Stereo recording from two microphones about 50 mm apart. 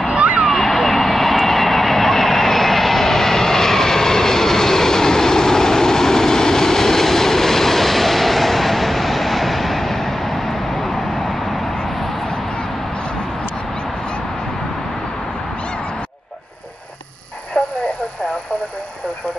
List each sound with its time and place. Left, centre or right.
0.2 s vehicle: right
0.5 s vehicle: centre
17.6 s a sound: centre